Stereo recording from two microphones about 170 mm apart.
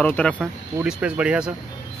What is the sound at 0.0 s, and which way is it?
Speech, 10° left (ahead or behind).